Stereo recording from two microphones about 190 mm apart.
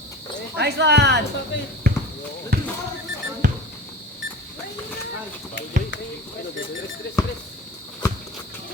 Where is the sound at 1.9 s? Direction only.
55° right (ahead or behind).